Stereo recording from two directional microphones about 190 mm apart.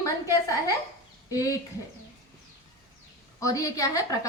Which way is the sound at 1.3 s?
20° left (ahead or behind).